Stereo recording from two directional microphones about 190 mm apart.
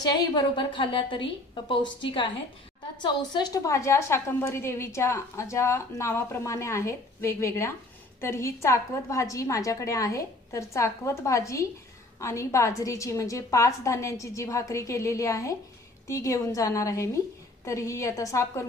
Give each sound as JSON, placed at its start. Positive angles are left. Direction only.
{"t": 0.0, "sound": "a woman's voice", "side_deg": 20}